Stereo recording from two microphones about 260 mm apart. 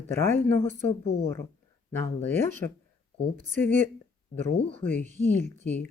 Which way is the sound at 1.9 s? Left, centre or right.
Centre.